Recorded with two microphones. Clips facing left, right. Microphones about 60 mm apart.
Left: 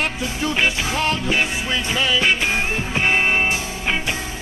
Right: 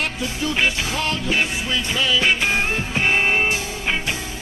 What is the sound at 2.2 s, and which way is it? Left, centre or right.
Music, centre.